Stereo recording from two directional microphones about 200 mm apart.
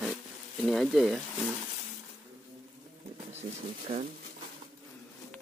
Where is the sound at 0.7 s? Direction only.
Centre (ahead or behind).